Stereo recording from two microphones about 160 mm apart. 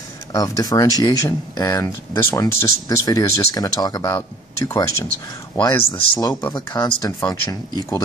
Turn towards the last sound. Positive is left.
turn(degrees=20)  # may be behind; listen again after turning